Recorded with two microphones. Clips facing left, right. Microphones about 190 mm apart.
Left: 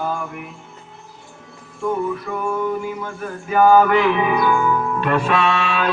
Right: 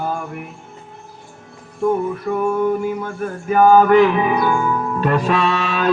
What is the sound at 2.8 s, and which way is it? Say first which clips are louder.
Music: right 5 dB; 45° right (ahead or behind).